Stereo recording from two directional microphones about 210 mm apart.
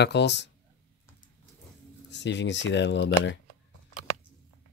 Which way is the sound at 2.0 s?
55° left (ahead or behind).